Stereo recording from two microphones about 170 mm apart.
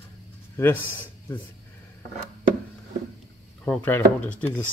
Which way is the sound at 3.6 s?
10° left (ahead or behind).